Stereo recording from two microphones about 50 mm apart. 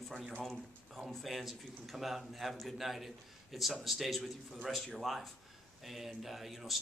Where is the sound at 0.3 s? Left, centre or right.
Centre.